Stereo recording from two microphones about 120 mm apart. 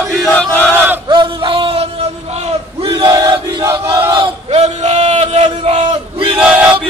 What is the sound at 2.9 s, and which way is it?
Battle cry, 30° right (ahead or behind).